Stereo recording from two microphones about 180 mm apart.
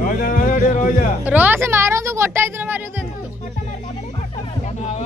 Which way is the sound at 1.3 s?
10° right (ahead or behind).